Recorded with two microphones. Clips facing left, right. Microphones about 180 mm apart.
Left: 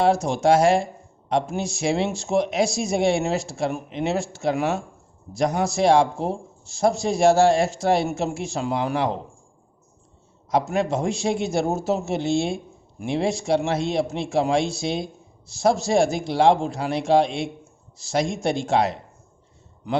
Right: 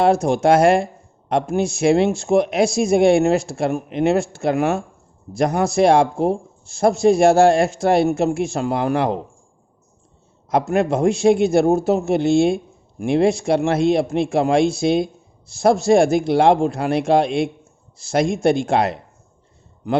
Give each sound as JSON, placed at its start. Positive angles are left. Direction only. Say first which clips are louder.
{"t": 0.0, "sound": "a man's voice", "louder": "right 4 dB", "side_deg": -55}
{"t": 10.5, "sound": "a man's voice", "louder": "right 4 dB", "side_deg": -55}